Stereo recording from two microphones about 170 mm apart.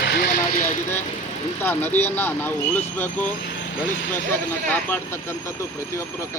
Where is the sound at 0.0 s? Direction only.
60° left (ahead or behind).